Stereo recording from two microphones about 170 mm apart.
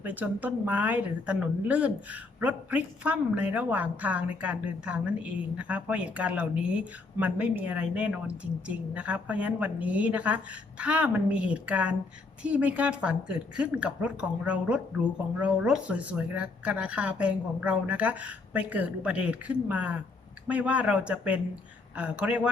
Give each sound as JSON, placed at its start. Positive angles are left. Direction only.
{"t": 0.0, "sound": "a woman's voice", "side_deg": -10}